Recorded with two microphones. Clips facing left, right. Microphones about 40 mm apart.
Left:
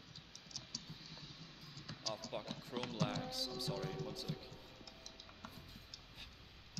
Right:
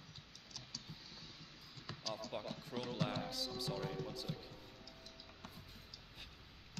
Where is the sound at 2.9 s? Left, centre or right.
Centre.